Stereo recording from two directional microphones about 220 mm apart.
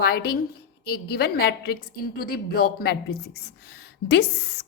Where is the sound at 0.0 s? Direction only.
45° left (ahead or behind).